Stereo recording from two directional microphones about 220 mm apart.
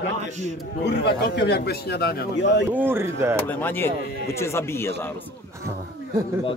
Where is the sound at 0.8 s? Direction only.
50° left (ahead or behind).